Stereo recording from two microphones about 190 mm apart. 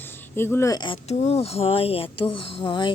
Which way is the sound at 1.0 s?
35° left (ahead or behind).